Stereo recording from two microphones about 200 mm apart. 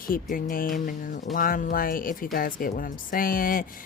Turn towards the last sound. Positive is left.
turn(degrees=45)  # may be behind; listen again after turning